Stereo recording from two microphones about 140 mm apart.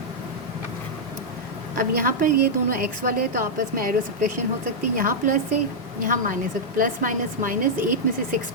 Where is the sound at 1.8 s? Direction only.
85° right.